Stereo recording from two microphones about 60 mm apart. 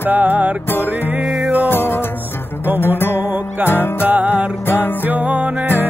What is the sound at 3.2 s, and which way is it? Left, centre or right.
Music, right.